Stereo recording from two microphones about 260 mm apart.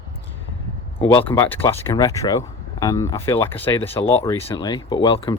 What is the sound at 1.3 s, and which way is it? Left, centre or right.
Speech, centre.